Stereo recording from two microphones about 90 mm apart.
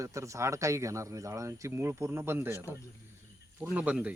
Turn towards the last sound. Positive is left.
turn(degrees=-15)  # may be behind; listen again after turning